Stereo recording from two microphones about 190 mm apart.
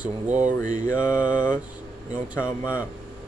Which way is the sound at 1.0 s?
20° left (ahead or behind).